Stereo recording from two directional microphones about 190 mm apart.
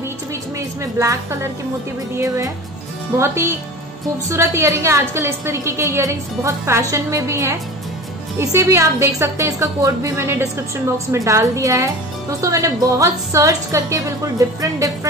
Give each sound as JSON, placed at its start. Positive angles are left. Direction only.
{"t": 0.6, "sound": "a woman's voice", "side_deg": -15}